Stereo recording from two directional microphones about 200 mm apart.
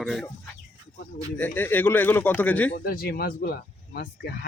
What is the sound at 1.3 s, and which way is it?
A man's voice, 10° left (ahead or behind).